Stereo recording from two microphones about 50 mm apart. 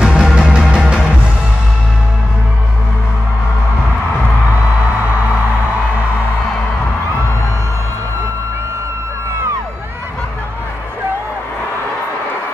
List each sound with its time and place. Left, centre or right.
0.0 s music: centre
0.5 s music: right